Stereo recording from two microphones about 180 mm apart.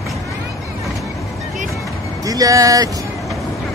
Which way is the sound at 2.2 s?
20° right (ahead or behind).